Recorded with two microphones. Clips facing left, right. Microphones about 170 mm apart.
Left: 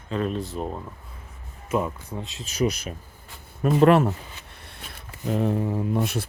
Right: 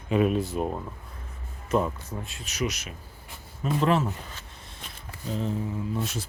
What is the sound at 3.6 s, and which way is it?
Speech, 60° left (ahead or behind).